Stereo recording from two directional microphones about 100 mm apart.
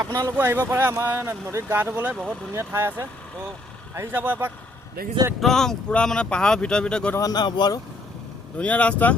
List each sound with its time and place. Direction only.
0.0 s speech: 35° right (ahead or behind)
0.3 s speech: 20° right (ahead or behind)
5.4 s speech: 5° left (ahead or behind)
7.2 s speech: 40° left (ahead or behind)
8.5 s speech: 15° left (ahead or behind)